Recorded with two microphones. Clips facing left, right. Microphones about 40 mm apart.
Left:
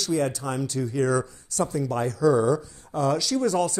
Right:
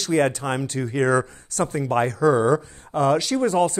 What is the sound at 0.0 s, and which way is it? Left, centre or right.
Speech, right.